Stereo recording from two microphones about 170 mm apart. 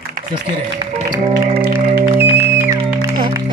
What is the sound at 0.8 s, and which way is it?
Speech, 25° right (ahead or behind).